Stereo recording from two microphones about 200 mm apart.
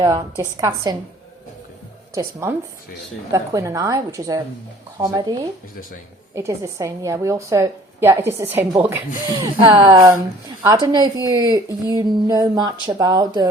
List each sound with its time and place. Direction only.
0.0 s a woman's voice: 15° right (ahead or behind)
2.1 s a woman's voice: 10° right (ahead or behind)
6.3 s a woman's voice: 15° right (ahead or behind)